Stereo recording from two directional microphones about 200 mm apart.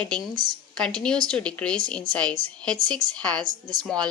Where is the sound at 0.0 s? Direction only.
5° left (ahead or behind).